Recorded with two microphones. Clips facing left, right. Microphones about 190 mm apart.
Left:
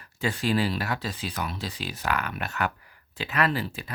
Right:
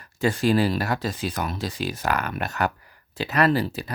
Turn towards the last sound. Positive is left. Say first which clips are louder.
# right 6 dB
turn(degrees=-40)  # may be behind; listen again after turning